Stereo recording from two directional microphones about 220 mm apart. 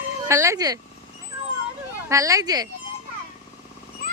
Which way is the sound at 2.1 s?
15° right (ahead or behind).